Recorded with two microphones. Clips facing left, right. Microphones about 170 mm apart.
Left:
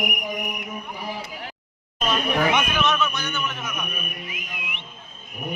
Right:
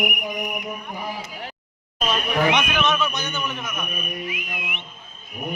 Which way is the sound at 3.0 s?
20° right (ahead or behind).